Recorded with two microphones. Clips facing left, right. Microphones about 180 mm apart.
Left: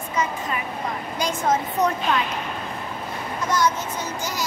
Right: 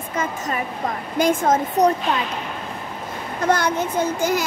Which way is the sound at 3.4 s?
60° right (ahead or behind).